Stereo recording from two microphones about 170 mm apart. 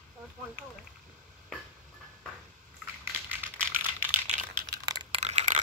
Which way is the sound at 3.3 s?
10° right (ahead or behind).